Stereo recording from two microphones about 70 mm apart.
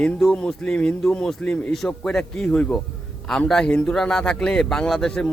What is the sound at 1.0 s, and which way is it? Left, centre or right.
A man's voice, centre.